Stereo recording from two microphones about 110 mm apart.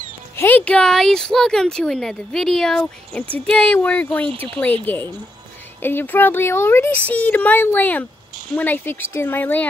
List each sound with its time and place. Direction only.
0.4 s speech: 15° left (ahead or behind)
4.3 s speech: 50° right (ahead or behind)
4.8 s speech: 20° left (ahead or behind)